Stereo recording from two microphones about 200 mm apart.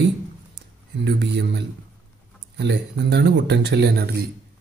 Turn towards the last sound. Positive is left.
turn(degrees=-55)  # may be behind; listen again after turning